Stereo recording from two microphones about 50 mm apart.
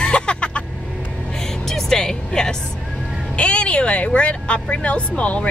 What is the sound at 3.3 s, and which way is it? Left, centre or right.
Speech, left.